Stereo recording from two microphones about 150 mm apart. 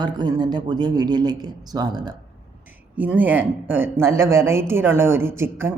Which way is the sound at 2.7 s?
10° right (ahead or behind).